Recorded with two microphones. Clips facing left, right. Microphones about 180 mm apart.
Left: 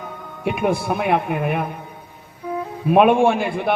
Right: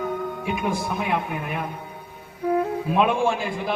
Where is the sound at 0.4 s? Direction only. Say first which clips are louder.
Left 9 dB; 65° left (ahead or behind).